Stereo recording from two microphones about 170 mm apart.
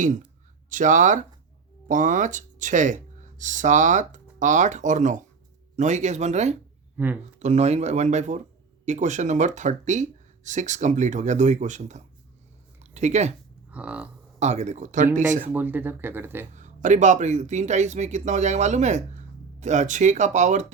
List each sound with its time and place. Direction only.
0.0 s speech: 50° right (ahead or behind)
6.9 s speech: 10° right (ahead or behind)
7.3 s speech: 40° right (ahead or behind)
13.7 s speech: 5° right (ahead or behind)
14.3 s speech: 40° right (ahead or behind)
15.5 s speech: 10° right (ahead or behind)
16.6 s speech: 45° right (ahead or behind)